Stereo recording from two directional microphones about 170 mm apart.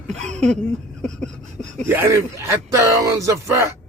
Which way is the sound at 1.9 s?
15° right (ahead or behind).